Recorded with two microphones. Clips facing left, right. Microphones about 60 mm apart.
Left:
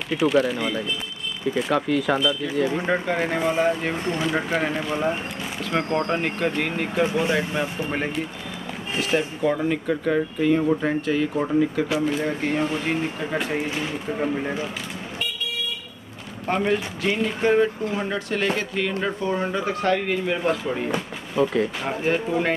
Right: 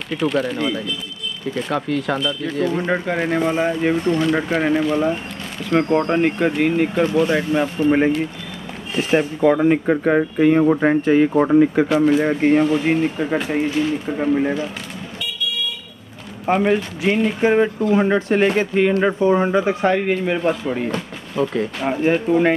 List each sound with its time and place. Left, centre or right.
0.1 s speech: centre
2.9 s speech: centre
4.8 s speech: centre
5.7 s speech: centre
7.0 s speech: centre
7.3 s speech: centre
9.4 s speech: right
14.0 s speech: centre
16.4 s speech: centre
17.4 s speech: centre
17.8 s speech: right; by 20.8 s centre
20.9 s speech: centre
21.8 s speech: centre